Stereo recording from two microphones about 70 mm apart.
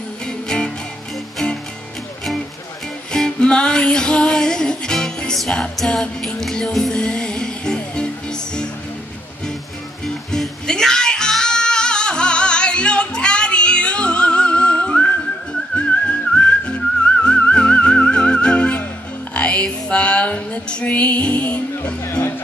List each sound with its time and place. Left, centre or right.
0.3 s music: centre
3.1 s music: centre
10.0 s music: centre
15.7 s whistling: centre
17.2 s music: centre